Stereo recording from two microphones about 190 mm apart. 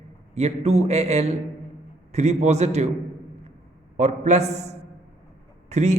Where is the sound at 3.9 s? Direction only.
35° right (ahead or behind).